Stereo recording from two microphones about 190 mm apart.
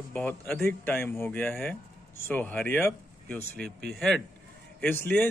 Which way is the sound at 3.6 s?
60° right (ahead or behind).